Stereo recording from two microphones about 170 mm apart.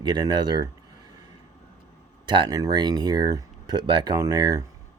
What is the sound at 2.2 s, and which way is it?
Speech, 25° right (ahead or behind).